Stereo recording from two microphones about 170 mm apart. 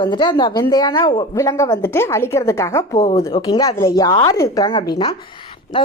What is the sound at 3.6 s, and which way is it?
A woman's voice, 20° left (ahead or behind).